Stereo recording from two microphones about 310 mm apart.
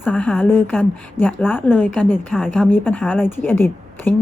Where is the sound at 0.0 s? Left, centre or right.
Centre.